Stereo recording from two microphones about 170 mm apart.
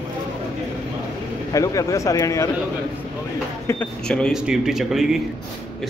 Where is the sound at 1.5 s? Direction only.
20° left (ahead or behind).